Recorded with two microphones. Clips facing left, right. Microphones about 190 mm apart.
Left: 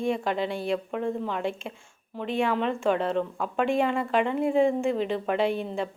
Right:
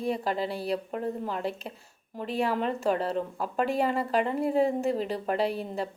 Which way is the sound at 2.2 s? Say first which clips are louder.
Left 2 dB; 40° right (ahead or behind).